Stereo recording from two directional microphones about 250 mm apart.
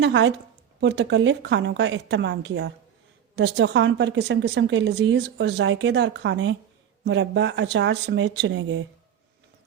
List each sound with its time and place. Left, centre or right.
0.0 s a woman's voice: right